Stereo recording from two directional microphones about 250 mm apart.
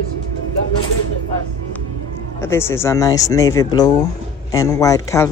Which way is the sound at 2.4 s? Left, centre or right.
Centre.